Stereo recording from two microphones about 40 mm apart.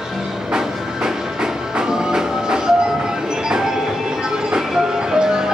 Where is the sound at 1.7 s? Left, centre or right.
Centre.